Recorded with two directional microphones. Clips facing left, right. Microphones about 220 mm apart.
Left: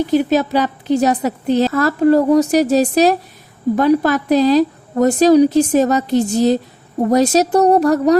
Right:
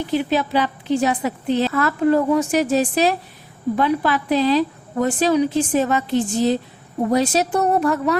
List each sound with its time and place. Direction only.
0.1 s a woman's voice: 40° left (ahead or behind)